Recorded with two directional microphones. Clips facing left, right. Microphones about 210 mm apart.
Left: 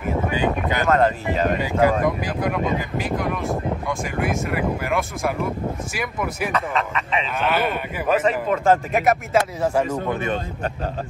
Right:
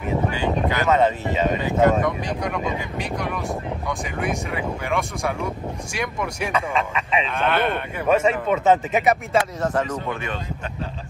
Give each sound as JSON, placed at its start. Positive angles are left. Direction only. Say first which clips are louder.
{"t": 0.8, "sound": "speech", "louder": "left 1 dB", "side_deg": 0}